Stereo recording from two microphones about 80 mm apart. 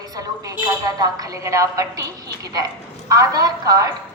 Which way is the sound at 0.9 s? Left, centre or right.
Right.